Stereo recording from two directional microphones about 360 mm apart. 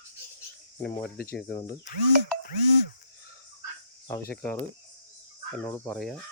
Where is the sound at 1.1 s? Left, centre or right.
Left.